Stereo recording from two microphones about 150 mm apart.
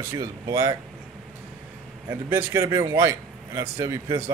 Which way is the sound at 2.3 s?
25° right (ahead or behind).